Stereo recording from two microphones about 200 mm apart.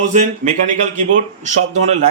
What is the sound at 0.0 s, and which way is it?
A man's voice, 35° right (ahead or behind).